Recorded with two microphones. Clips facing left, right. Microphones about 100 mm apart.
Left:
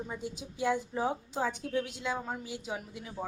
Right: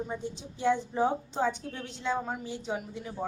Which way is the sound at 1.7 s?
10° left (ahead or behind).